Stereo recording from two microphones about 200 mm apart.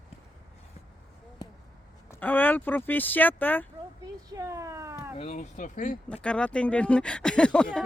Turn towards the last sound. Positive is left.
turn(degrees=5)  # may be behind; listen again after turning